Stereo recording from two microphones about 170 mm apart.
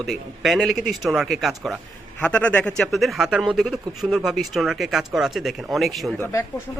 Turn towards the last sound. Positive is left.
turn(degrees=20)  # may be behind; listen again after turning